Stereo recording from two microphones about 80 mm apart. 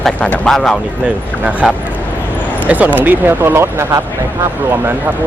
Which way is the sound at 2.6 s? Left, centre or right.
Centre.